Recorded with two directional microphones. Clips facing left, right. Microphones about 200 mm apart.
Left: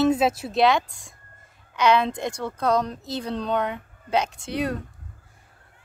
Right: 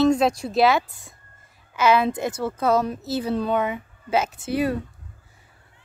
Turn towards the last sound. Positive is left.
turn(degrees=-5)  # may be behind; listen again after turning